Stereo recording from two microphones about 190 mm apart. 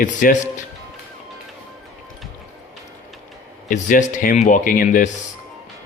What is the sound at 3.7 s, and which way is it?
Speech, 45° left (ahead or behind).